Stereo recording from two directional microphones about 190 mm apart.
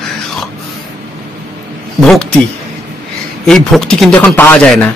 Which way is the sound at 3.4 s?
5° left (ahead or behind).